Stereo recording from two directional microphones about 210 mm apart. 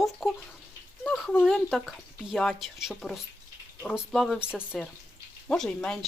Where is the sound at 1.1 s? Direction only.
Centre (ahead or behind).